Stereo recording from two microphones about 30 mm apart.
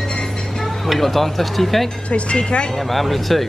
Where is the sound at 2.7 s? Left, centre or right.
Centre.